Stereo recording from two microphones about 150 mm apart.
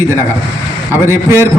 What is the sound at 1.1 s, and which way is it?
Speech, 20° right (ahead or behind).